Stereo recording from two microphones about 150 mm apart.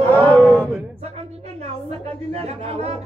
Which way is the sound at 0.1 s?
10° left (ahead or behind).